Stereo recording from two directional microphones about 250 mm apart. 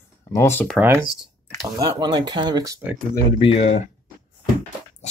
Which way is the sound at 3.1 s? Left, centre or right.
Left.